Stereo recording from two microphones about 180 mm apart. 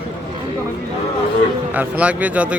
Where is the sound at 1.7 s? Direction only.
10° right (ahead or behind).